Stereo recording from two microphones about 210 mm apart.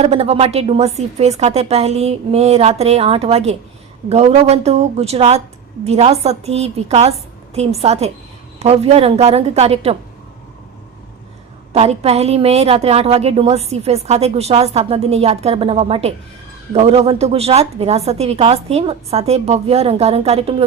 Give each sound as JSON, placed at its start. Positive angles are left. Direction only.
{"t": 0.0, "sound": "a woman's voice", "side_deg": -30}
{"t": 11.7, "sound": "a woman's voice", "side_deg": -30}